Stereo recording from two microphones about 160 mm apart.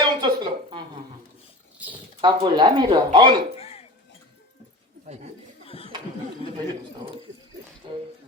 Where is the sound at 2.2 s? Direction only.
25° right (ahead or behind).